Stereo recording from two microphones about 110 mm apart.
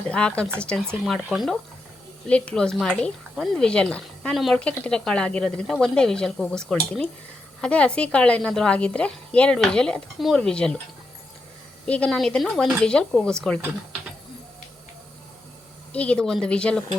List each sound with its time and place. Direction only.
0.1 s a woman's voice: 10° left (ahead or behind)
2.2 s a woman's voice: 10° left (ahead or behind)
11.9 s a woman's voice: 10° left (ahead or behind)
15.9 s a woman's voice: 10° left (ahead or behind)